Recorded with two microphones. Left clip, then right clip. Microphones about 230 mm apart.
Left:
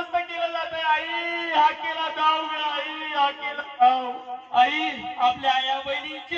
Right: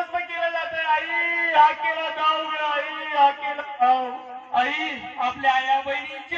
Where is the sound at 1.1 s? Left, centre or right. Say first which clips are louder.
Right 4 dB; left.